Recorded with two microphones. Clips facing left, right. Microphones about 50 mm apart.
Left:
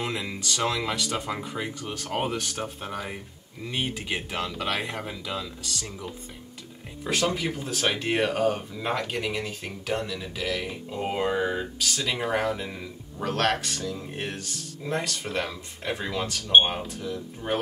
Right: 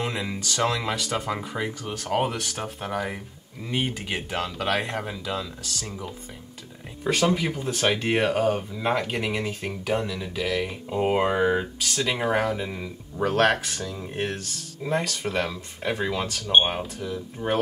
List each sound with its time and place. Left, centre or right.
0.0 s speech: centre
2.1 s speech: centre
4.5 s speech: centre
7.1 s speech: centre
10.9 s speech: centre
11.8 s speech: centre
16.5 s speech: centre
16.8 s speech: centre